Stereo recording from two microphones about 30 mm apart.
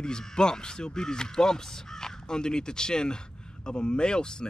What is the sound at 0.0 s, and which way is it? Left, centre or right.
Speech, left.